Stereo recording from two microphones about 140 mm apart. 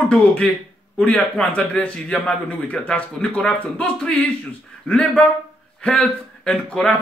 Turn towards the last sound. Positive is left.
turn(degrees=10)  # may be behind; listen again after turning